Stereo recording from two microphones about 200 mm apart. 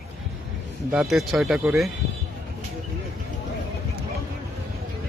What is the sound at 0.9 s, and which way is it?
Speech, centre (ahead or behind).